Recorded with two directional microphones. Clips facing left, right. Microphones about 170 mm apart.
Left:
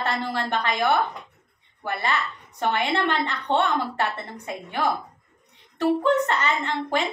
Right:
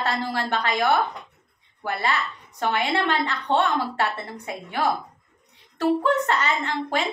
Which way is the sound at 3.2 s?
20° left (ahead or behind).